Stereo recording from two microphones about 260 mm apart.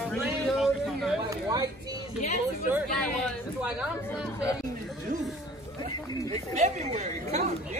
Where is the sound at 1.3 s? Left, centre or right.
Centre.